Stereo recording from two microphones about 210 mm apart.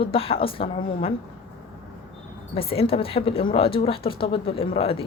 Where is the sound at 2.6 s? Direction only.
25° left (ahead or behind).